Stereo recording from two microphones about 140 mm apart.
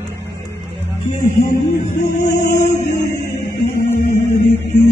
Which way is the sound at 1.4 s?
65° left (ahead or behind).